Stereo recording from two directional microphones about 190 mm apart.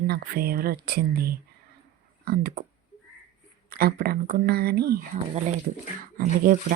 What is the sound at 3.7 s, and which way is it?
Speech, 50° right (ahead or behind).